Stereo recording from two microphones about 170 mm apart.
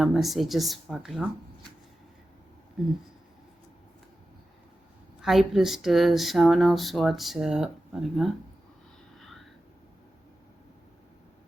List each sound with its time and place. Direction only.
0.0 s speech: centre (ahead or behind)
2.8 s speech: centre (ahead or behind)
5.2 s speech: centre (ahead or behind)
9.1 s whispering: centre (ahead or behind)